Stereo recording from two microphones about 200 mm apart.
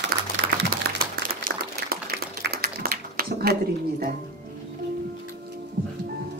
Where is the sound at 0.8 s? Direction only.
50° right (ahead or behind).